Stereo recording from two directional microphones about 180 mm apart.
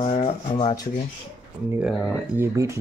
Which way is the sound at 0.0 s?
30° left (ahead or behind).